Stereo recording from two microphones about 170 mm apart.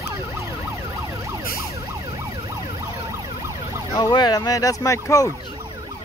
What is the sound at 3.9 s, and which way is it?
Speech, 25° left (ahead or behind).